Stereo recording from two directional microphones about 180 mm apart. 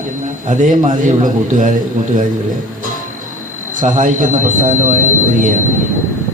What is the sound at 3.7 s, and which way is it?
A man's voice, 45° right (ahead or behind).